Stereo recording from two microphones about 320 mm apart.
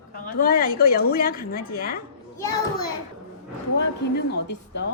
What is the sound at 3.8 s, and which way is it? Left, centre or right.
Speech, left.